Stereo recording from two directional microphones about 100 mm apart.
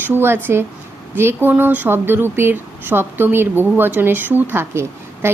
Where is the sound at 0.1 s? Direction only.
25° right (ahead or behind).